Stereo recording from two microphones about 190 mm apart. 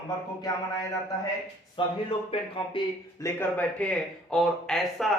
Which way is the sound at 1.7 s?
30° left (ahead or behind).